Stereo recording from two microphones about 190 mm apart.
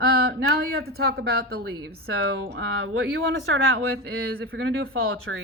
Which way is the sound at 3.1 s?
90° right.